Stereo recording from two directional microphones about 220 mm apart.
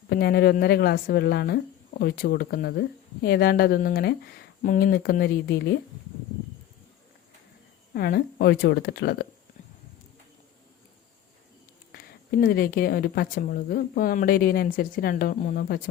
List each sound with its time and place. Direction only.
0.1 s speech: 45° left (ahead or behind)
7.9 s speech: 45° left (ahead or behind)
11.9 s speech: 45° left (ahead or behind)